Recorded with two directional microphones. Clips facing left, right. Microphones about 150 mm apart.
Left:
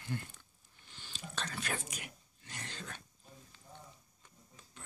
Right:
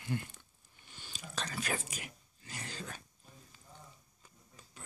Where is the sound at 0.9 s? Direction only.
10° right (ahead or behind).